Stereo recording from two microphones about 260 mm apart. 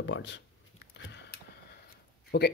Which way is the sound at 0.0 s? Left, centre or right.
Left.